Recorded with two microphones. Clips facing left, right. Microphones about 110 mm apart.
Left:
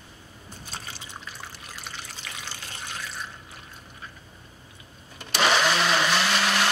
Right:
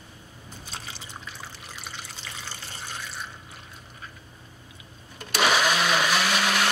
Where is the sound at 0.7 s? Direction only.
Centre (ahead or behind).